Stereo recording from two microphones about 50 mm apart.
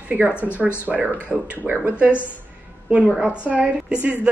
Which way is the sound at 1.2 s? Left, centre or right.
Right.